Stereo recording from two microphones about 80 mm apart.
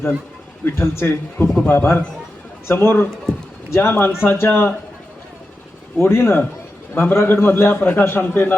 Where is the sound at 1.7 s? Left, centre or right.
Left.